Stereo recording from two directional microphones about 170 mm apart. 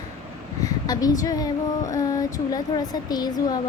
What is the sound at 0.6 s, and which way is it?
Female singing, 20° left (ahead or behind).